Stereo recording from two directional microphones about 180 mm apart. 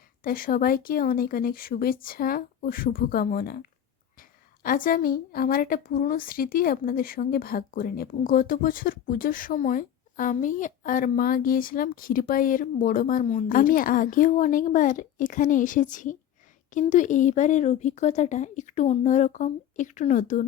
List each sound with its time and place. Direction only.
0.2 s a woman's voice: 50° left (ahead or behind)